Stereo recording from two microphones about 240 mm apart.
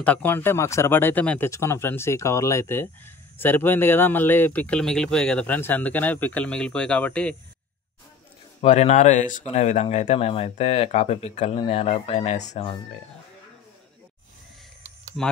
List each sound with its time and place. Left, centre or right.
0.0 s speech: centre
8.5 s speech: left